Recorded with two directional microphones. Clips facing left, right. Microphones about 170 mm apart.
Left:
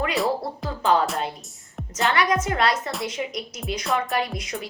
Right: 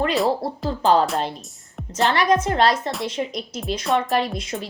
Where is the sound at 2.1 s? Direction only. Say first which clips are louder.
Right 4 dB; 30° right (ahead or behind).